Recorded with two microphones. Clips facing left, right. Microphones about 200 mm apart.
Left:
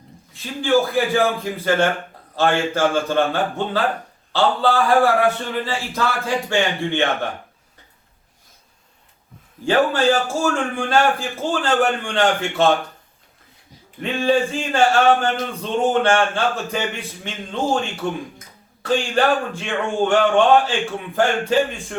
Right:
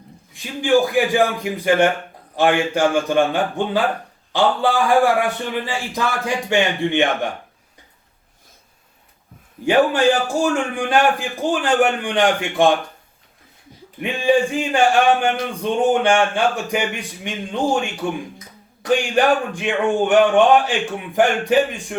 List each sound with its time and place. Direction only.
0.4 s speech: 15° right (ahead or behind)
9.6 s speech: 15° right (ahead or behind)
14.0 s speech: 15° right (ahead or behind)